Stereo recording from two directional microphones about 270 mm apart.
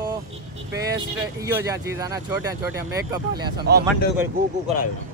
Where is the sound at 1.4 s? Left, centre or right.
Centre.